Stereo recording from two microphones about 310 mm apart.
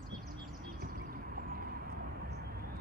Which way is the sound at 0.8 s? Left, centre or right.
Right.